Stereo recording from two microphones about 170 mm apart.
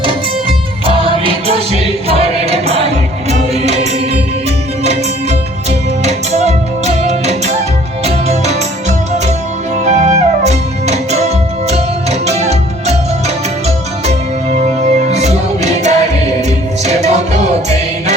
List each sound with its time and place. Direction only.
0.4 s music: 35° right (ahead or behind)
6.1 s music: 40° right (ahead or behind)
9.8 s music: 40° right (ahead or behind)